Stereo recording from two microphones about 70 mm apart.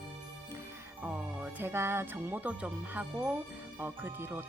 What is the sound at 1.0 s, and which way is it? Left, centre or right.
Speech, right.